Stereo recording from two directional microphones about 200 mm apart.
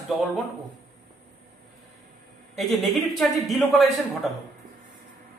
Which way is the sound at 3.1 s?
Centre (ahead or behind).